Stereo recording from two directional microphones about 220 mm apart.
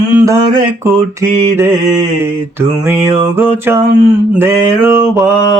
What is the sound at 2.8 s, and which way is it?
Mantra, 10° right (ahead or behind).